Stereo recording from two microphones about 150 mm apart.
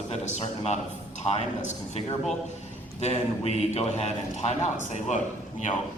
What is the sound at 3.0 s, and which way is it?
A man's voice, 45° left (ahead or behind).